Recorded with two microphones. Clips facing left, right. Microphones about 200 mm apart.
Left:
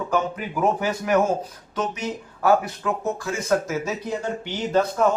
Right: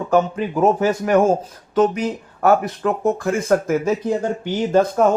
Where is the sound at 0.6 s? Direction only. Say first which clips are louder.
Right 6 dB; 45° right (ahead or behind).